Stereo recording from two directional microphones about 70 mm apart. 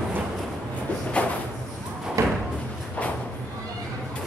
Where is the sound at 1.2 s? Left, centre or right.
Centre.